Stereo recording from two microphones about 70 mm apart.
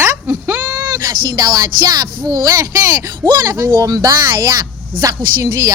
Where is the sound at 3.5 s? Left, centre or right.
Right.